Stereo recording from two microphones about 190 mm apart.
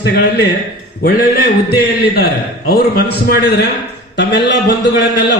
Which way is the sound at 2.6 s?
55° left (ahead or behind).